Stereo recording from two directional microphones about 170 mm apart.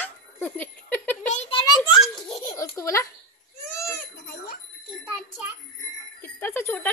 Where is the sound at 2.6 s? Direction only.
15° left (ahead or behind).